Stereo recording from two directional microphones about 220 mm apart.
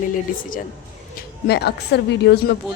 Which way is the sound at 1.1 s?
50° left (ahead or behind).